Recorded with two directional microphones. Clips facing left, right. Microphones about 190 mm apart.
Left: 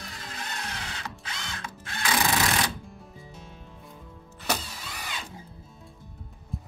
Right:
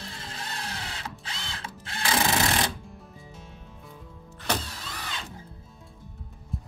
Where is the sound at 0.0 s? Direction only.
30° right (ahead or behind).